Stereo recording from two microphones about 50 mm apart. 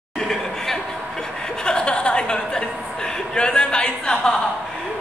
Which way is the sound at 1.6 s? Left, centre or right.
Centre.